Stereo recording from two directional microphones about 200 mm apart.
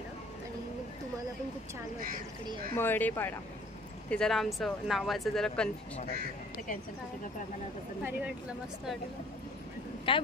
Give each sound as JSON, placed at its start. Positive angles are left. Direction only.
{"t": 2.7, "sound": "speech", "side_deg": 10}
{"t": 8.0, "sound": "a woman's voice", "side_deg": -5}
{"t": 10.1, "sound": "speech", "side_deg": 25}